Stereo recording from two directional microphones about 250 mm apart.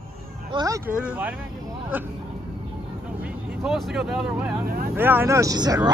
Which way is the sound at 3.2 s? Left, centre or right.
Centre.